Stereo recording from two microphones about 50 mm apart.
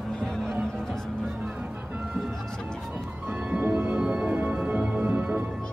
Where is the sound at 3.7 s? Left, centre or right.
Right.